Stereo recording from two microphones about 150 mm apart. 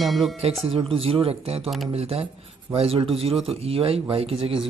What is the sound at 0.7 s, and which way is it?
Speech, 40° right (ahead or behind).